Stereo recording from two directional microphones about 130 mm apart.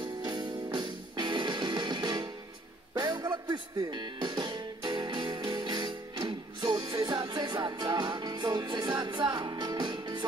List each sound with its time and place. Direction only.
0.0 s music: 35° right (ahead or behind)